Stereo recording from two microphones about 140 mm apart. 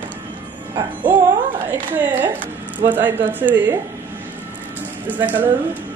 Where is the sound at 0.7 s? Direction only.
35° right (ahead or behind).